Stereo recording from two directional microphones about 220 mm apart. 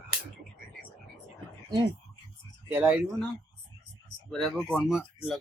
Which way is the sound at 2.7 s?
10° right (ahead or behind).